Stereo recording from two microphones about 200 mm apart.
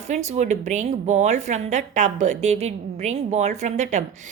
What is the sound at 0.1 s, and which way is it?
A woman's voice, 35° right (ahead or behind).